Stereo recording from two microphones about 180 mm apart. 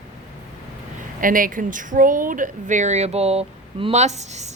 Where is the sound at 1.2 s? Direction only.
50° right (ahead or behind).